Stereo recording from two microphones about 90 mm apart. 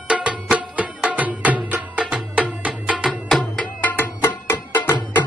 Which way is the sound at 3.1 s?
5° left (ahead or behind).